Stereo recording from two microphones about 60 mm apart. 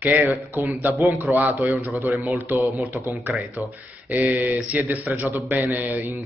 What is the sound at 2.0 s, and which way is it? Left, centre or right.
Speech, right.